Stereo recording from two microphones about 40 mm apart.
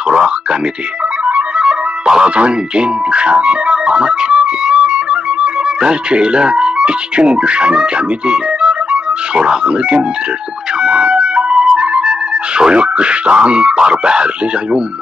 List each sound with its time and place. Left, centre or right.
0.1 s a sound: right
1.6 s speech: centre
10.8 s music: right